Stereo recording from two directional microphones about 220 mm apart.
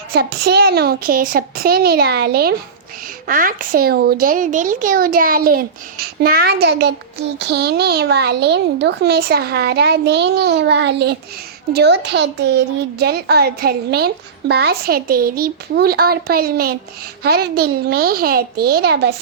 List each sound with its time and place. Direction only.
0.1 s speech: 45° right (ahead or behind)